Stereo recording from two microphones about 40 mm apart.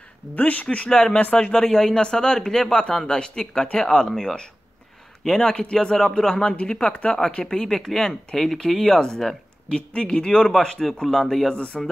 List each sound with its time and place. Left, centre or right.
0.4 s speech: left
0.8 s speech: centre
1.7 s speech: centre
2.0 s speech: centre
5.4 s speech: centre
7.7 s speech: centre
9.7 s speech: left; by 11.5 s centre
11.5 s speech: left